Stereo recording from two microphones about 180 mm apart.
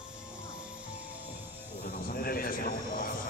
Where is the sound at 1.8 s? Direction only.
60° left (ahead or behind).